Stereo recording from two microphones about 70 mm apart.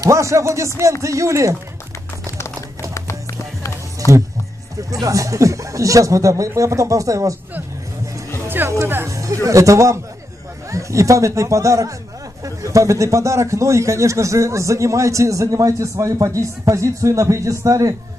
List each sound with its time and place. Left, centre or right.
0.0 s speech: right
2.3 s music: left
5.0 s speech: right
8.5 s music: right
9.0 s speech: right